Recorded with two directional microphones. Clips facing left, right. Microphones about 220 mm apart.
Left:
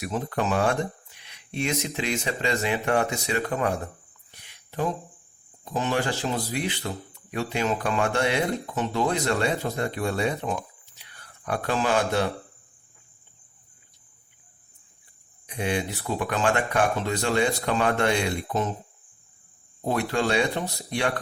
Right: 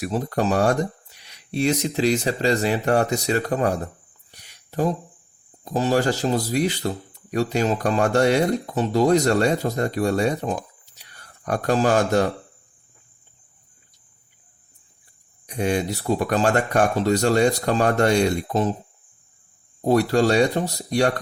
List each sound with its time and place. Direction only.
0.0 s speech: 40° right (ahead or behind)
4.3 s a sound: 40° right (ahead or behind)
5.6 s speech: 35° right (ahead or behind)
15.4 s speech: 40° right (ahead or behind)
19.8 s speech: 40° right (ahead or behind)